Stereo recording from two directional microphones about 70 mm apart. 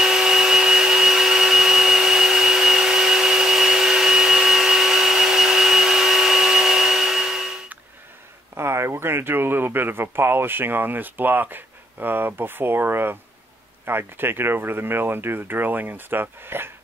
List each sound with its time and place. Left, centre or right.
0.0 s tools: centre
8.5 s speech: right